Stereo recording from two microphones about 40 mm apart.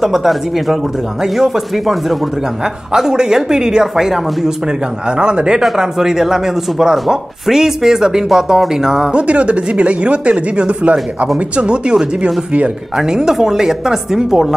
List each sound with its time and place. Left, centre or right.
0.0 s speech: centre
2.9 s speech: centre
5.1 s speech: right
5.8 s speech: centre
9.1 s speech: right; by 14.5 s centre